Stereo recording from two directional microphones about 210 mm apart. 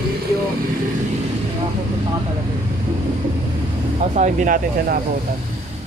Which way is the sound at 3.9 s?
35° right (ahead or behind).